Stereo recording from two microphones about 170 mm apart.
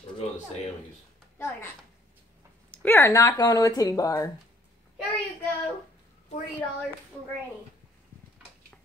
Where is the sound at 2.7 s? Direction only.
10° left (ahead or behind).